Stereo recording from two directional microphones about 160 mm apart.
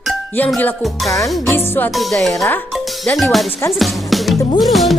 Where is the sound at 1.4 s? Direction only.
15° left (ahead or behind).